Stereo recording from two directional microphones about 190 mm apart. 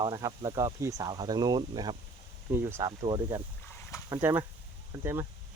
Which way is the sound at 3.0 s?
25° right (ahead or behind).